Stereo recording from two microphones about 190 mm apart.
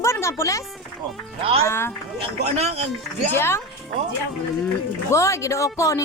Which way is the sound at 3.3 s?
15° left (ahead or behind).